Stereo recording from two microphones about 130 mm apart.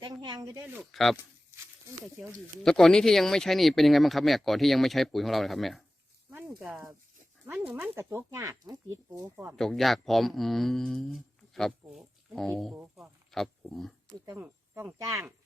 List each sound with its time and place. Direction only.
0.0 s a sound: 35° right (ahead or behind)
0.8 s speech: centre (ahead or behind)
2.6 s speech: 5° left (ahead or behind)
7.7 s speech: 20° right (ahead or behind)
9.3 s speech: 20° right (ahead or behind)
9.6 s speech: centre (ahead or behind)
12.7 s speech: 10° right (ahead or behind)
13.3 s speech: centre (ahead or behind)
14.3 s speech: 15° right (ahead or behind)